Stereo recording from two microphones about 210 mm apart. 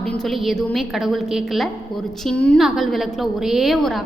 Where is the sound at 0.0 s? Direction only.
Centre (ahead or behind).